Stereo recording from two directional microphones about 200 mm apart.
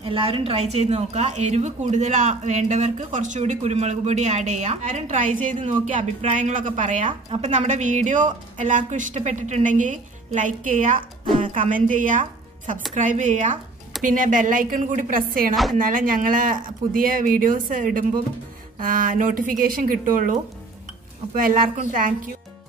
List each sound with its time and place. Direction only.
0.0 s a woman's voice: 25° right (ahead or behind); by 15.5 s 45° right (ahead or behind)
15.5 s speech: centre (ahead or behind)
15.8 s speech: 45° right (ahead or behind)